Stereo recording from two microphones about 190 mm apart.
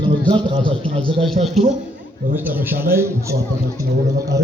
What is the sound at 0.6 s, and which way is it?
Speech, 25° right (ahead or behind).